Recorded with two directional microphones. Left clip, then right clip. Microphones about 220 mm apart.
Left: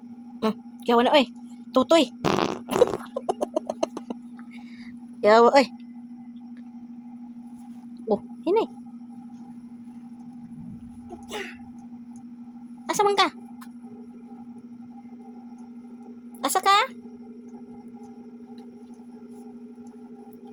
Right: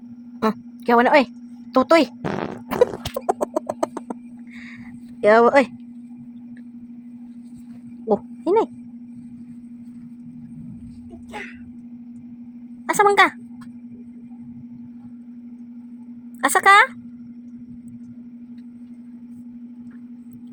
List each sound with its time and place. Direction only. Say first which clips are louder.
0.4 s a woman's voice: right 4 dB; 15° right (ahead or behind)
2.2 s fart: left 3 dB; 10° left (ahead or behind)
3.2 s a sound: right 6 dB; 20° right (ahead or behind)
5.2 s speech: right 2 dB; 10° right (ahead or behind)
8.0 s a sound: right 4 dB; 15° right (ahead or behind)
12.9 s speech: right 6 dB; 20° right (ahead or behind)
16.4 s speech: right 7 dB; 20° right (ahead or behind)